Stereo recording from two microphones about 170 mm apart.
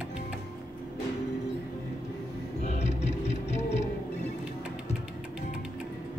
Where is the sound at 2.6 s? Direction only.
40° left (ahead or behind).